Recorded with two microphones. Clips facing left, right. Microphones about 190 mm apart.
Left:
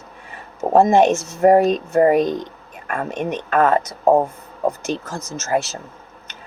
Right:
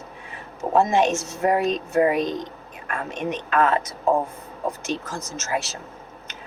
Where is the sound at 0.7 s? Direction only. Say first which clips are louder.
Left 6 dB; 50° left (ahead or behind).